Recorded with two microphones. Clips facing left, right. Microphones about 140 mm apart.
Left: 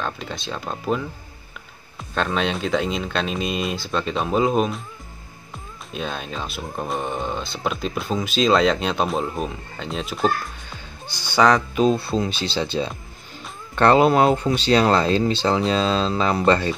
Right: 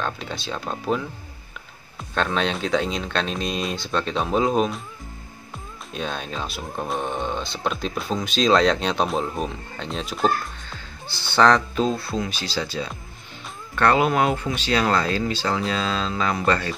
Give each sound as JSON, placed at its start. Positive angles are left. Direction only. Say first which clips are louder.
{"t": 0.0, "sound": "speech", "louder": "even", "side_deg": 0}
{"t": 2.1, "sound": "speech", "louder": "left 1 dB", "side_deg": 0}
{"t": 5.9, "sound": "speech", "louder": "even", "side_deg": 0}
{"t": 10.7, "sound": "speech", "louder": "even", "side_deg": 15}